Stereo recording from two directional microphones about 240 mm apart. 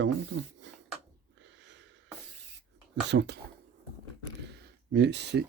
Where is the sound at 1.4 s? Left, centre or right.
Right.